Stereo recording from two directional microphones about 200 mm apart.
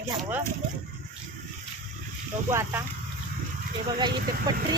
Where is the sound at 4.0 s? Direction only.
20° right (ahead or behind).